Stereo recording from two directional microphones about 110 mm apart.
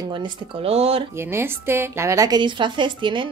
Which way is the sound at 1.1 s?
20° right (ahead or behind).